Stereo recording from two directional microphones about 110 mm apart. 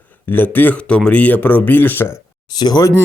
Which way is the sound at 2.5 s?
40° left (ahead or behind).